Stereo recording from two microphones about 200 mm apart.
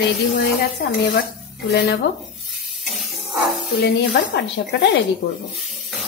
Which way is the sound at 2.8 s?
Centre (ahead or behind).